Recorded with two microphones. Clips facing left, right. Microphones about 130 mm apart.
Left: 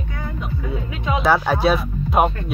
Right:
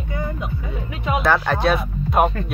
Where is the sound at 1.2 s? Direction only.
5° left (ahead or behind).